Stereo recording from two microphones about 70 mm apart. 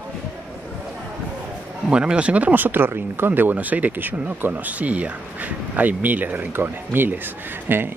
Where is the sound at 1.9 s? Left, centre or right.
Centre.